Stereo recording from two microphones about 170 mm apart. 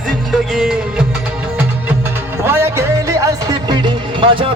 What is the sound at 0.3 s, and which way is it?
Music, 5° right (ahead or behind).